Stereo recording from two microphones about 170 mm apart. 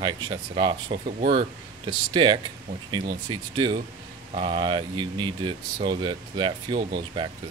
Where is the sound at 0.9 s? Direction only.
45° right (ahead or behind).